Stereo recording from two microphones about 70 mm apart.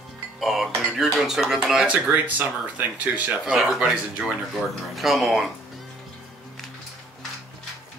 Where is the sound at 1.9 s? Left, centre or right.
Right.